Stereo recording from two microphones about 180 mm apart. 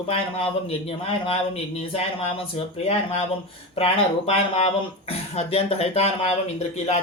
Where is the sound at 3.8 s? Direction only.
35° left (ahead or behind).